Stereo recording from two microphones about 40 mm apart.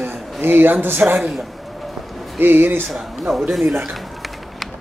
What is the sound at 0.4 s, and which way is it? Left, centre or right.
Speech, right.